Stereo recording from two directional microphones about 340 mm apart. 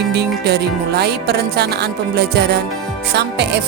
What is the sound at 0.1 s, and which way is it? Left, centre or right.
Speech, right.